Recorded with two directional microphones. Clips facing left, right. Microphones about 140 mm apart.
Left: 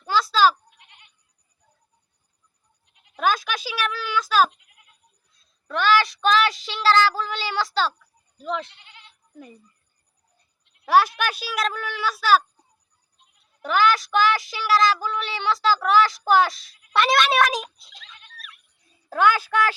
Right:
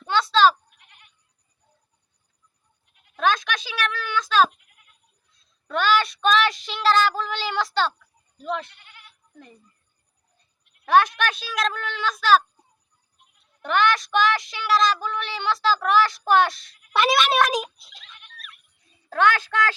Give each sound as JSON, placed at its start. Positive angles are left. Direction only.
{"t": 0.0, "sound": "goat", "side_deg": 0}
{"t": 0.9, "sound": "goat", "side_deg": 20}
{"t": 3.2, "sound": "a sound", "side_deg": 5}
{"t": 5.6, "sound": "child singing", "side_deg": 0}
{"t": 8.6, "sound": "goat", "side_deg": 25}
{"t": 10.6, "sound": "a sound", "side_deg": 25}
{"t": 10.8, "sound": "speech", "side_deg": 5}
{"t": 13.6, "sound": "child singing", "side_deg": 5}
{"t": 17.1, "sound": "a child's voice", "side_deg": 0}